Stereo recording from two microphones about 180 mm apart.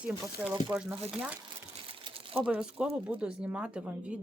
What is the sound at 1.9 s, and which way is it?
Crumpling, 30° right (ahead or behind).